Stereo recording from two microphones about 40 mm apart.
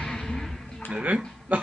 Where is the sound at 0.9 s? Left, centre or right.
Right.